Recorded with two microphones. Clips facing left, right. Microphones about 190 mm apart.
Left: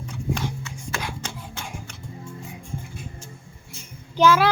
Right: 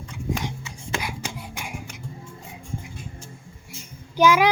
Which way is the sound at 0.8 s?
20° right (ahead or behind).